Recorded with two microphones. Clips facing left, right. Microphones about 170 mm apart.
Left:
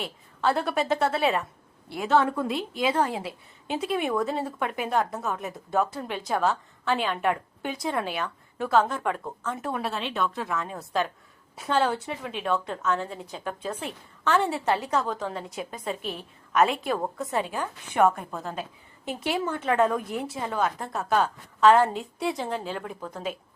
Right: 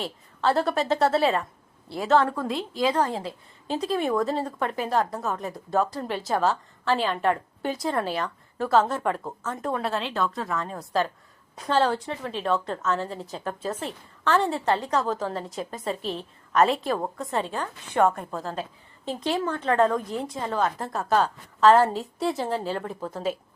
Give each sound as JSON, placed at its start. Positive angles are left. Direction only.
{"t": 0.4, "sound": "a woman's voice", "side_deg": 0}
{"t": 1.2, "sound": "speech", "side_deg": 15}
{"t": 2.8, "sound": "a woman's voice", "side_deg": 10}
{"t": 16.0, "sound": "a woman's voice", "side_deg": -30}
{"t": 16.5, "sound": "a woman's voice", "side_deg": 0}
{"t": 17.3, "sound": "speech", "side_deg": 15}
{"t": 18.2, "sound": "a woman's voice", "side_deg": 0}